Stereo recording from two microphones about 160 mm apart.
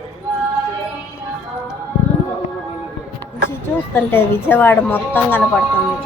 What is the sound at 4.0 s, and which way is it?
A woman's voice, 15° left (ahead or behind).